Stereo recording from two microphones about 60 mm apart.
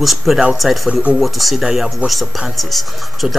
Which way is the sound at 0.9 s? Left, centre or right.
Centre.